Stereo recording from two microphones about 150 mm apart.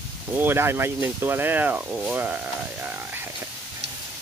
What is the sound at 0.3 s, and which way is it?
Speech, 15° right (ahead or behind).